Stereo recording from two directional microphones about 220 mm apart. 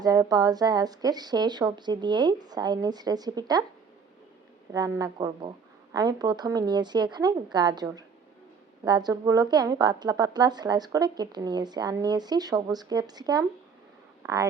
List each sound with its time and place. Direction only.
0.0 s speech: 15° right (ahead or behind)
4.7 s a woman's voice: 15° right (ahead or behind)